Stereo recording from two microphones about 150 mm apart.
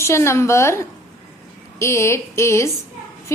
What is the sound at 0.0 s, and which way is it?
A woman's voice, 20° left (ahead or behind).